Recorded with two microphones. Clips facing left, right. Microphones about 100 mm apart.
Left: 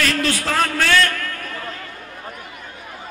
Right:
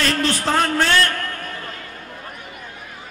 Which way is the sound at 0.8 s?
30° right (ahead or behind).